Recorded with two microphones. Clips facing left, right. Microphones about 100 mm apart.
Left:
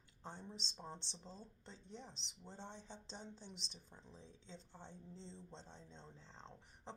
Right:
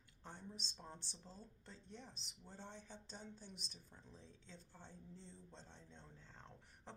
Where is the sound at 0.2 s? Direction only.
20° left (ahead or behind).